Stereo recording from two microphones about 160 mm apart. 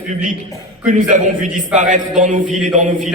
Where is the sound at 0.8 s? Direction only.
55° right (ahead or behind).